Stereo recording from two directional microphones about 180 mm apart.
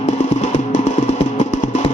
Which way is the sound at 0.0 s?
40° left (ahead or behind).